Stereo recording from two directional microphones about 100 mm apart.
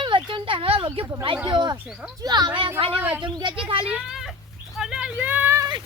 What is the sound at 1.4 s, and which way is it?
Speech, 50° right (ahead or behind).